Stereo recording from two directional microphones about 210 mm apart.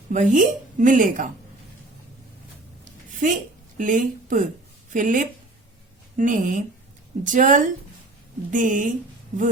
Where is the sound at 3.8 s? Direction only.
40° right (ahead or behind).